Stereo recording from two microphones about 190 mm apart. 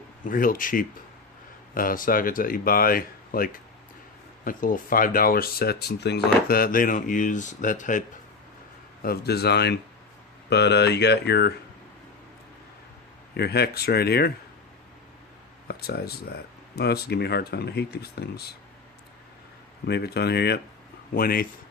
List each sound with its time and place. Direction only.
0.3 s speech: 45° left (ahead or behind)
9.0 s speech: 55° left (ahead or behind)
13.3 s speech: 55° left (ahead or behind)
15.6 s speech: 55° left (ahead or behind)
19.9 s speech: 60° left (ahead or behind)